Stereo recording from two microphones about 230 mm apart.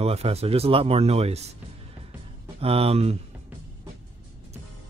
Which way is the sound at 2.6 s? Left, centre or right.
Right.